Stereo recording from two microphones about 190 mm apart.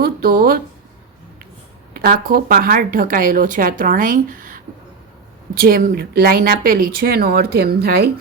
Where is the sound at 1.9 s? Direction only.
50° right (ahead or behind).